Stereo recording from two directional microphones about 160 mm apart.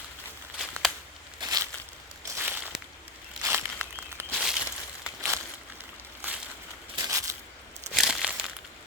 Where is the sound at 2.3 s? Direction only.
15° right (ahead or behind).